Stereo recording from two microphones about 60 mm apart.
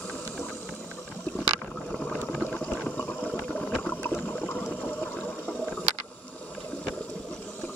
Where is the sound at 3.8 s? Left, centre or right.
Left.